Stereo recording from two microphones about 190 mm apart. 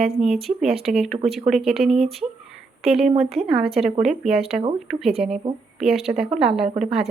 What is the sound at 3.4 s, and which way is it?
Speech, 30° right (ahead or behind).